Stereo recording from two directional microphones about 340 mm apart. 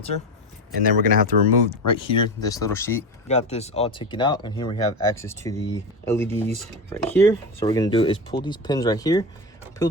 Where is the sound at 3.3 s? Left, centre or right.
Centre.